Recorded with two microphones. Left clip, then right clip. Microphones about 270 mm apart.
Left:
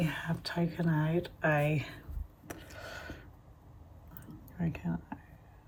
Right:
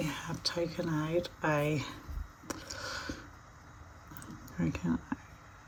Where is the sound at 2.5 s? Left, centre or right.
Right.